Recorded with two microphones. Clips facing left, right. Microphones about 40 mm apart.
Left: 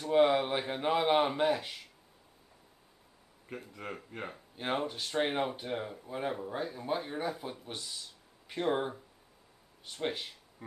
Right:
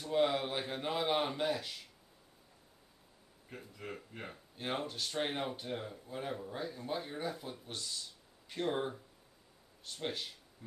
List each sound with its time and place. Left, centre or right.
0.0 s speech: left
3.7 s speech: left
4.3 s speech: centre